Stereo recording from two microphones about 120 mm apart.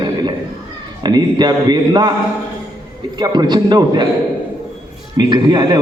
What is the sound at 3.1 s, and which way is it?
Speech, 35° right (ahead or behind).